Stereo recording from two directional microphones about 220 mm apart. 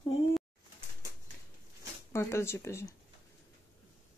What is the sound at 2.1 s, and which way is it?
Speech, 10° left (ahead or behind).